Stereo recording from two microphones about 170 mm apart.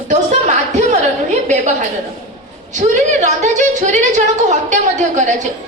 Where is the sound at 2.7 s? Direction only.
45° right (ahead or behind).